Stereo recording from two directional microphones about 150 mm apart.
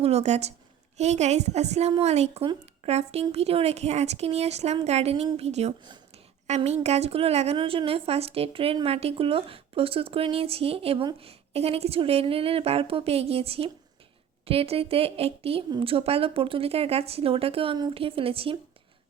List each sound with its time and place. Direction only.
0.0 s a woman's voice: 45° right (ahead or behind)